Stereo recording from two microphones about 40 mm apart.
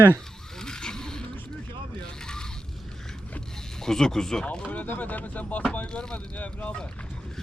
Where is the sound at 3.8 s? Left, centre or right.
Centre.